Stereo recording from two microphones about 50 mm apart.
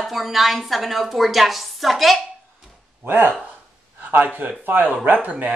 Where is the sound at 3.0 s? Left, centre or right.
Right.